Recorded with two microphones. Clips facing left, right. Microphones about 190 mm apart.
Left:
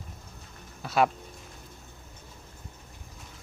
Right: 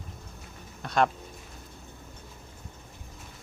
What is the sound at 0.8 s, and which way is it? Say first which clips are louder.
Speech: left 1 dB; 5° left (ahead or behind).